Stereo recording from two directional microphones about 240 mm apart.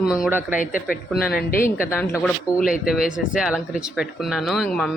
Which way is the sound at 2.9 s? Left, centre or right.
Centre.